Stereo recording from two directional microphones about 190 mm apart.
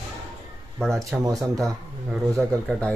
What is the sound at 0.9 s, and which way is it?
Speech, 15° right (ahead or behind).